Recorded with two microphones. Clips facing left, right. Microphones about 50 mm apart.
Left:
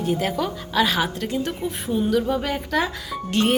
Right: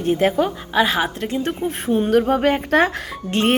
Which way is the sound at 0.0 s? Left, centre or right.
Right.